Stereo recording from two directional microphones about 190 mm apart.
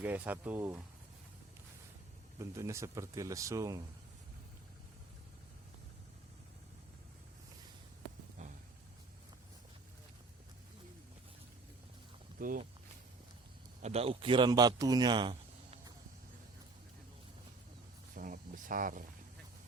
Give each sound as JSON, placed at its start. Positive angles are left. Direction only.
{"t": 0.0, "sound": "speech", "side_deg": -10}
{"t": 2.4, "sound": "speech", "side_deg": -15}
{"t": 8.4, "sound": "a sound", "side_deg": -35}
{"t": 12.4, "sound": "speech", "side_deg": -45}
{"t": 13.8, "sound": "speech", "side_deg": -30}
{"t": 18.1, "sound": "a sound", "side_deg": -45}